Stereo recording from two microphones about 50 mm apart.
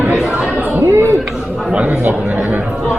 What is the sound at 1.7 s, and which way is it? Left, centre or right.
Speech, right.